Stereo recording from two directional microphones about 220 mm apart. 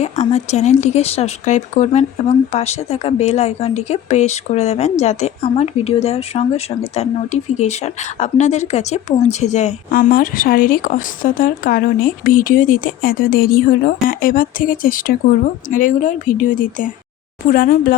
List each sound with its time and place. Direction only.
0.0 s speech: 30° left (ahead or behind)